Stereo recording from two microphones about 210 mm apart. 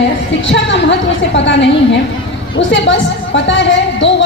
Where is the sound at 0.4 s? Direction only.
60° left (ahead or behind).